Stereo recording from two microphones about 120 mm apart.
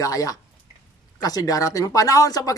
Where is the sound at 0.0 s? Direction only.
30° left (ahead or behind).